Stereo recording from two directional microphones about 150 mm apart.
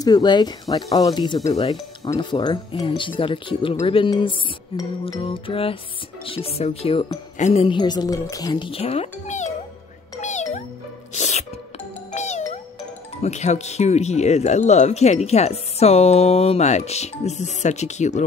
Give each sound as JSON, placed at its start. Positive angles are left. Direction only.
{"t": 0.0, "sound": "speech", "side_deg": 25}
{"t": 7.3, "sound": "speech", "side_deg": 50}
{"t": 7.6, "sound": "speech", "side_deg": 30}
{"t": 10.2, "sound": "music", "side_deg": 50}
{"t": 13.2, "sound": "speech", "side_deg": 50}